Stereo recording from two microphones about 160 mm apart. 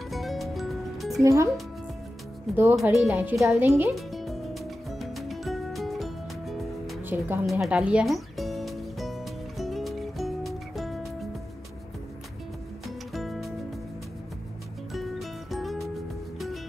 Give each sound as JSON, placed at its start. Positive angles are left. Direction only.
{"t": 0.1, "sound": "music", "side_deg": 0}
{"t": 1.2, "sound": "speech", "side_deg": -20}
{"t": 2.7, "sound": "speech", "side_deg": 0}
{"t": 3.1, "sound": "speech", "side_deg": -10}
{"t": 3.9, "sound": "music", "side_deg": 0}
{"t": 7.0, "sound": "music", "side_deg": -15}
{"t": 7.4, "sound": "music", "side_deg": 0}
{"t": 12.8, "sound": "music", "side_deg": 0}
{"t": 14.9, "sound": "music", "side_deg": 0}